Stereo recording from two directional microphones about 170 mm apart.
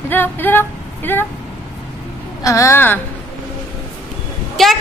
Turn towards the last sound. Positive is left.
turn(degrees=0)  # may be behind; listen again after turning